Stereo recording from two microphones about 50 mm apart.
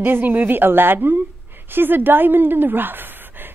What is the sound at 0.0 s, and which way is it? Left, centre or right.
A woman's voice, right.